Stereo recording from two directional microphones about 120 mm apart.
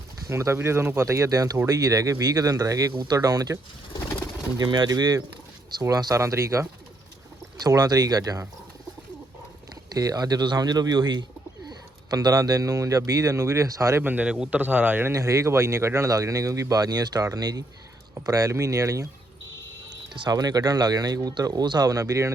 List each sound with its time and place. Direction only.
0.3 s speech: 20° right (ahead or behind)
2.9 s speech: 40° right (ahead or behind)
3.2 s speech: 30° right (ahead or behind)
9.9 s speech: 30° right (ahead or behind)
14.0 s a man's voice: 15° right (ahead or behind)
15.1 s speech: 25° right (ahead or behind)
20.1 s speech: 35° right (ahead or behind)